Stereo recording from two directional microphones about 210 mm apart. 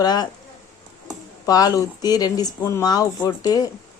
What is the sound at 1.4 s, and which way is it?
Speech, 15° left (ahead or behind).